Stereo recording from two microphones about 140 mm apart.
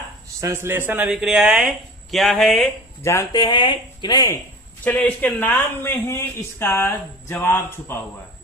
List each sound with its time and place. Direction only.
0.4 s speech: 15° right (ahead or behind)
1.1 s speech: 5° right (ahead or behind)
3.0 s speech: 20° left (ahead or behind)
4.8 s a man's voice: 10° left (ahead or behind)